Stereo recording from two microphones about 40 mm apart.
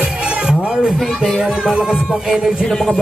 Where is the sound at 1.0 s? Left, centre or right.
Centre.